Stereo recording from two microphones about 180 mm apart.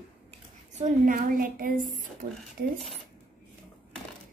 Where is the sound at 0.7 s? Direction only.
45° right (ahead or behind).